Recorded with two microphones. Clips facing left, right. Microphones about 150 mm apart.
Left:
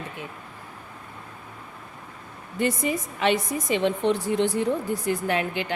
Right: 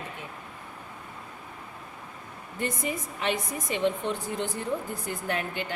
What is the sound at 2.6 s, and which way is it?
A woman's voice, 85° left.